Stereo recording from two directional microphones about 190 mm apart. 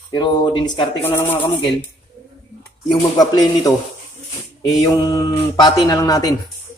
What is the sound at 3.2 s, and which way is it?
Speech, 20° left (ahead or behind).